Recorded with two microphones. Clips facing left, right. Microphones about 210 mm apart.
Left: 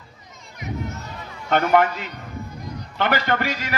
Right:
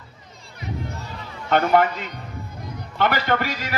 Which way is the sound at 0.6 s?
30° right (ahead or behind).